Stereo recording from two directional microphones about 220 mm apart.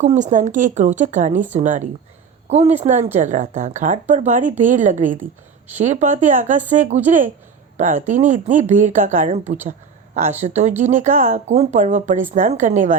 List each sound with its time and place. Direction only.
0.0 s a woman's voice: 35° right (ahead or behind)
10.4 s speech: 30° right (ahead or behind)